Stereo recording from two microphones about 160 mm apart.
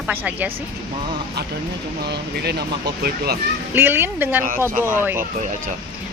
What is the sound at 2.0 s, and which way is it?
Speech, 90° right.